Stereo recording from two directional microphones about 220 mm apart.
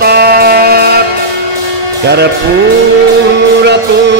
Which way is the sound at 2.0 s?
50° right (ahead or behind).